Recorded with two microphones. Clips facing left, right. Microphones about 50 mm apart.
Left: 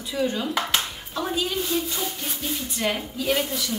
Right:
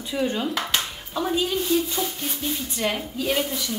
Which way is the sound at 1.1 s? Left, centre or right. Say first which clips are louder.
Right 3 dB; centre.